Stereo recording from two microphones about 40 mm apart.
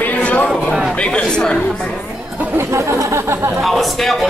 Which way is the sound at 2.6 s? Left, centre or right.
Right.